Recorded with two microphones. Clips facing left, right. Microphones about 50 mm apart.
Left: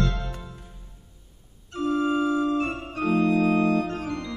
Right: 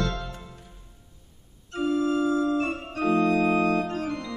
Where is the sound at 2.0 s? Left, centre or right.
Left.